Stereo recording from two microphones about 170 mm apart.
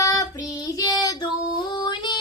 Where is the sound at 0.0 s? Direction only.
20° left (ahead or behind).